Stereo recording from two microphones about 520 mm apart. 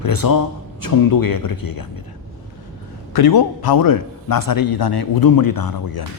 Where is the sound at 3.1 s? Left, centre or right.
Left.